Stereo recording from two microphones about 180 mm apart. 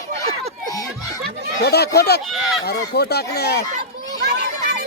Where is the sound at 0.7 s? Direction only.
20° left (ahead or behind).